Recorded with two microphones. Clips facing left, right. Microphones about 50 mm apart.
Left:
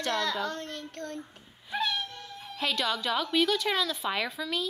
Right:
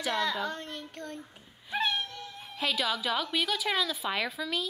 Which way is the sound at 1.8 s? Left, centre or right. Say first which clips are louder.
Right 1 dB; right.